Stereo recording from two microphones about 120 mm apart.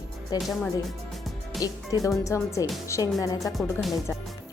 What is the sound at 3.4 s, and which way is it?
Speech, centre (ahead or behind).